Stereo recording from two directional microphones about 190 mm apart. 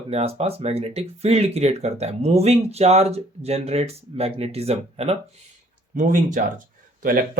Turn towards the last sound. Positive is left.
turn(degrees=-50)  # may be behind; listen again after turning